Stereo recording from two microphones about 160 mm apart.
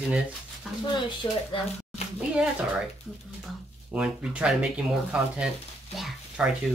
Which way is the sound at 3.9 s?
5° right (ahead or behind).